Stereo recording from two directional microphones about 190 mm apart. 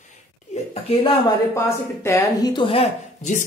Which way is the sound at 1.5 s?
15° left (ahead or behind).